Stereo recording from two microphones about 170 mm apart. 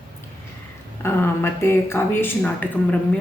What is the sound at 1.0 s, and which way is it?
A woman's voice, 15° left (ahead or behind).